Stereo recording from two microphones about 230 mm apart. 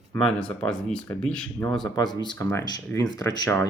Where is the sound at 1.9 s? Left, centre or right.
Centre.